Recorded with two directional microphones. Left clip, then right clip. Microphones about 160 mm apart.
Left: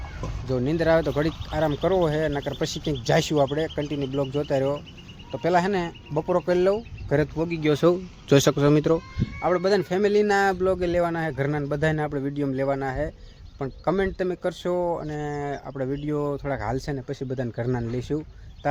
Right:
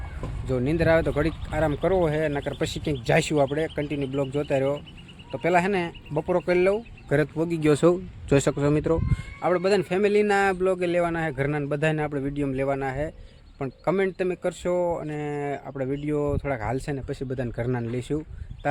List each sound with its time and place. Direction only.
0.2 s speech: centre (ahead or behind)
7.7 s a man's voice: 55° right (ahead or behind)
8.3 s speech: 10° left (ahead or behind)
9.4 s speech: 5° right (ahead or behind)